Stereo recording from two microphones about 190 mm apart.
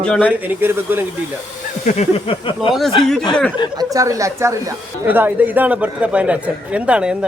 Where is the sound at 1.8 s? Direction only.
35° left (ahead or behind).